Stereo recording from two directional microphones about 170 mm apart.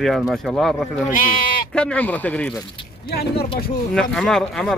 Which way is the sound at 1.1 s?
55° left (ahead or behind).